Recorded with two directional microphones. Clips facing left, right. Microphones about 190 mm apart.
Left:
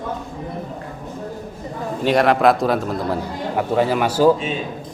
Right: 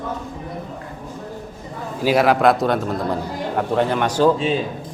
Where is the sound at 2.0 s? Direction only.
Centre (ahead or behind).